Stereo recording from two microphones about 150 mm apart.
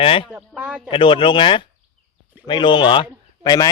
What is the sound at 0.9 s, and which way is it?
Speech, 35° left (ahead or behind).